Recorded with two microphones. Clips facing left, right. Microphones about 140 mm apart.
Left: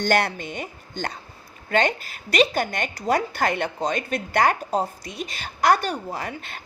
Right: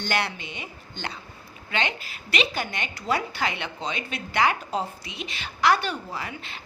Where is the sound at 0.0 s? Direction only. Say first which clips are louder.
Left 6 dB; 45° left (ahead or behind).